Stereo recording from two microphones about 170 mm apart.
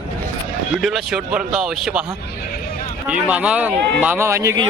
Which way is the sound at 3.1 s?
5° right (ahead or behind).